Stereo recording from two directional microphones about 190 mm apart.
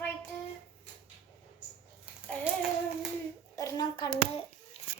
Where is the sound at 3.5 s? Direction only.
20° left (ahead or behind).